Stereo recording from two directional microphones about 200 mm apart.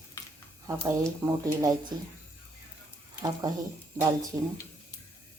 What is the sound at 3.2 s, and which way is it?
Speech, 20° right (ahead or behind).